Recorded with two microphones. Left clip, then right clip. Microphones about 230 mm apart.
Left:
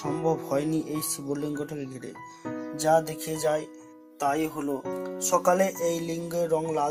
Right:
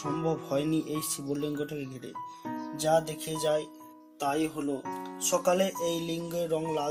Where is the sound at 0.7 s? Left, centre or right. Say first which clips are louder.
Left 1 dB; left.